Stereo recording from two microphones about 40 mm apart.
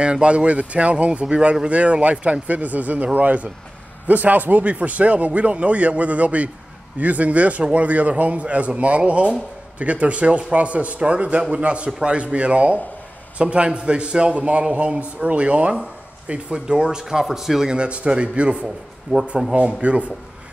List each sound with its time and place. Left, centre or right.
0.0 s a man's voice: right
17.0 s speech: centre
17.6 s speech: right